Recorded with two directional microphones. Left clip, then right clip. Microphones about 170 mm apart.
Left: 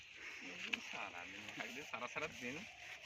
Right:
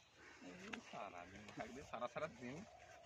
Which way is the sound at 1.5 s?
80° right.